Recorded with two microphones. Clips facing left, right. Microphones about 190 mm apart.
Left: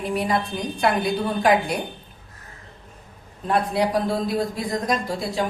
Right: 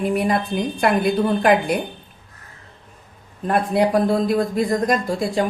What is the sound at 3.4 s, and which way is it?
Speech, 50° right (ahead or behind).